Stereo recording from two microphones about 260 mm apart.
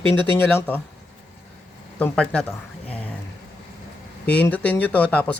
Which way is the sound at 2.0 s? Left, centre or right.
Centre.